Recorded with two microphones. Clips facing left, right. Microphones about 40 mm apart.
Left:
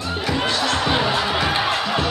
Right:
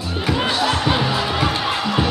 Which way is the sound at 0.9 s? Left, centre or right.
Centre.